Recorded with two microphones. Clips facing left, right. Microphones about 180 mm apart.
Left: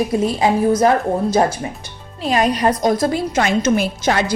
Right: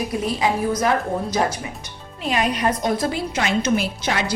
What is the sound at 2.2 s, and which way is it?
A woman's voice, 40° left (ahead or behind).